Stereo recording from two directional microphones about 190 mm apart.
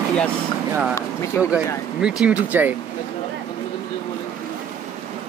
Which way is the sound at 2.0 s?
5° right (ahead or behind).